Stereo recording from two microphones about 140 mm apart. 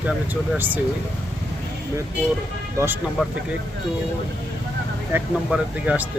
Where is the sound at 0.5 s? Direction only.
10° right (ahead or behind).